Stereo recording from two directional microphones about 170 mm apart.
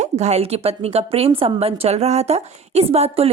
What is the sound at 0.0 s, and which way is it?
A woman's voice, 40° right (ahead or behind).